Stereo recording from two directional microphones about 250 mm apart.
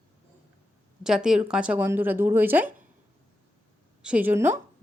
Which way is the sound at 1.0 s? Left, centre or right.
Centre.